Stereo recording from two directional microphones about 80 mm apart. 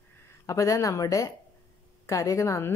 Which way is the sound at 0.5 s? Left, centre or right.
Left.